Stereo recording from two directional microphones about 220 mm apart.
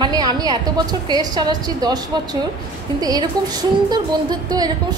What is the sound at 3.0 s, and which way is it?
A woman's voice, 15° right (ahead or behind).